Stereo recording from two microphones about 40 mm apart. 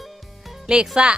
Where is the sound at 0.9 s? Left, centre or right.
Right.